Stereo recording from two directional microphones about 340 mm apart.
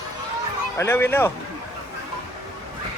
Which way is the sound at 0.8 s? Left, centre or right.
Centre.